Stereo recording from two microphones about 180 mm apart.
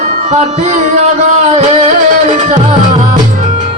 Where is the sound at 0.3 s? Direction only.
40° right (ahead or behind).